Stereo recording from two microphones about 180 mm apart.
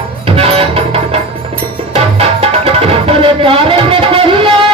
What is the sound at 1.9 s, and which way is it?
Music, 35° right (ahead or behind).